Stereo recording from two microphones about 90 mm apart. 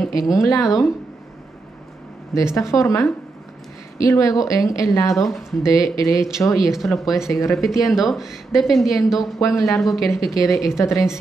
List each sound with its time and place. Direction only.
0.1 s speech: 40° left (ahead or behind)
2.3 s speech: 35° left (ahead or behind)
6.7 s speech: centre (ahead or behind)
7.2 s speech: 35° left (ahead or behind)
7.5 s speech: 5° right (ahead or behind)
10.2 s speech: 40° left (ahead or behind)